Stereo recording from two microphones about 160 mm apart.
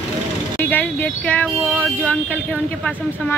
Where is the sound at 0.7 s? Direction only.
10° left (ahead or behind).